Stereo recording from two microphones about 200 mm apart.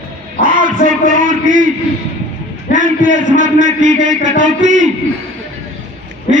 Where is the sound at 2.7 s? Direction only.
40° right (ahead or behind).